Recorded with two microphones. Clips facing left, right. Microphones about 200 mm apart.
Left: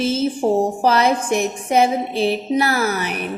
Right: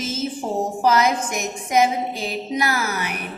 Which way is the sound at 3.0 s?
10° right (ahead or behind).